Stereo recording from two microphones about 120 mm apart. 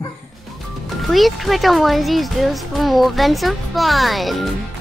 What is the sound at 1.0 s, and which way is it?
Speech, centre (ahead or behind).